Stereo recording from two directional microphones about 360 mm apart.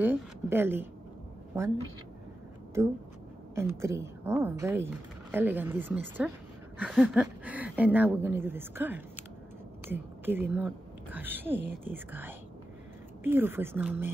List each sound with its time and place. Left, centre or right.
0.0 s speech: centre
3.5 s a woman's voice: centre